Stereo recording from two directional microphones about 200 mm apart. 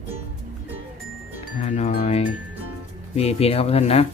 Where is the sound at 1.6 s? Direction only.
35° left (ahead or behind).